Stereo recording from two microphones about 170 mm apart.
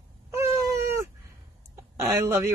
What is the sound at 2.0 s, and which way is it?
Speech, 15° right (ahead or behind).